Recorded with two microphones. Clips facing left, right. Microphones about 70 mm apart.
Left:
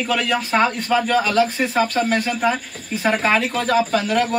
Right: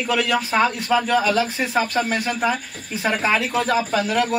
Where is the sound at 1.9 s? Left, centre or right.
Centre.